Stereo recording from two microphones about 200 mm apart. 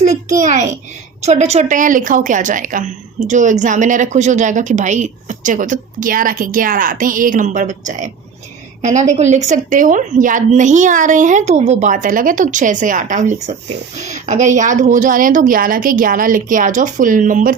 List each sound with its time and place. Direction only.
0.3 s a woman's voice: 35° right (ahead or behind)